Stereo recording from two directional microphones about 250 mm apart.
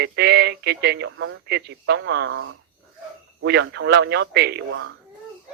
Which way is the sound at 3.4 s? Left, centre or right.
Right.